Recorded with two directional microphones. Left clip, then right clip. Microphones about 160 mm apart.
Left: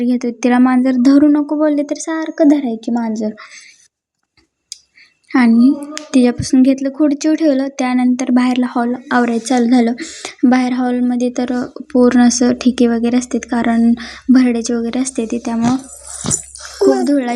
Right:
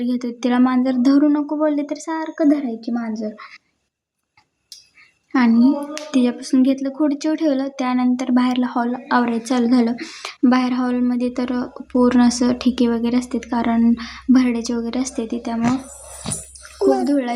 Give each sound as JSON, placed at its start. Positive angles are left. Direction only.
{"t": 0.0, "sound": "a woman's voice", "side_deg": 25}
{"t": 3.3, "sound": "speech", "side_deg": 15}
{"t": 5.5, "sound": "a woman's voice", "side_deg": 20}
{"t": 9.9, "sound": "a woman's voice", "side_deg": 10}
{"t": 16.2, "sound": "dog", "side_deg": 45}
{"t": 17.0, "sound": "a woman's voice", "side_deg": 25}